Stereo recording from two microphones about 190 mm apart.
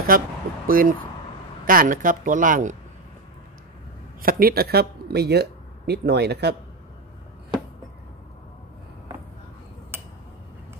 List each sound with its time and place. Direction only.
0.1 s speech: 50° right (ahead or behind)
4.2 s speech: 50° right (ahead or behind)